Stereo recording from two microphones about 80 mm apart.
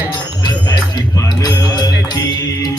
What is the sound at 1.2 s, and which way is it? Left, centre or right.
Music, left.